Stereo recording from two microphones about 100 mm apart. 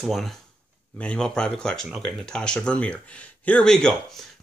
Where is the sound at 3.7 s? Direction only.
5° left (ahead or behind).